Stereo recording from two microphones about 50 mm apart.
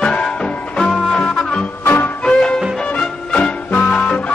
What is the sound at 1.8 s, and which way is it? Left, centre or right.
Music, left.